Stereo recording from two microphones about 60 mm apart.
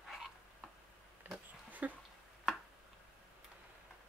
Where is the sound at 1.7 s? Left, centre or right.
Right.